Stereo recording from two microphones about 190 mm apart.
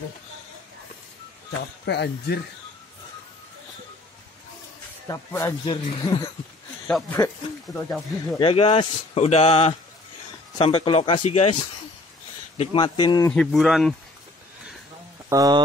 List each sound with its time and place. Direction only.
1.9 s speech: 60° left (ahead or behind)
5.0 s speech: 15° left (ahead or behind)
6.9 s speech: centre (ahead or behind)
8.4 s speech: 30° left (ahead or behind)
12.7 s speech: 25° left (ahead or behind)
13.3 s speech: centre (ahead or behind)
15.2 s speech: 20° right (ahead or behind)